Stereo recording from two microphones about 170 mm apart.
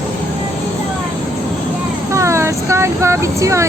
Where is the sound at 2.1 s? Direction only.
15° right (ahead or behind).